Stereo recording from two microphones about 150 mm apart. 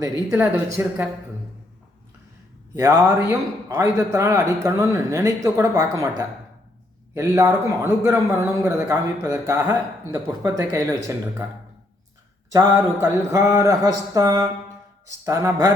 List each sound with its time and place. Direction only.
0.0 s speech: 15° right (ahead or behind)
2.7 s a man's voice: 20° right (ahead or behind)
12.5 s a man's voice: 20° right (ahead or behind)